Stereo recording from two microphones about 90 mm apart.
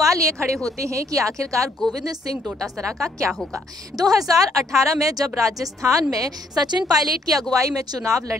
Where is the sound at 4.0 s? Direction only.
40° right (ahead or behind).